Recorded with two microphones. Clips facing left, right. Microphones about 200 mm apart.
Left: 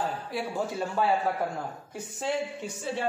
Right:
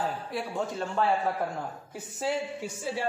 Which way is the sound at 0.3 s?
Centre (ahead or behind).